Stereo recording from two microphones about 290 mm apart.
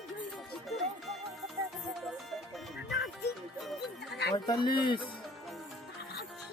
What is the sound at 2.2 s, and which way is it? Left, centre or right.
Music, centre.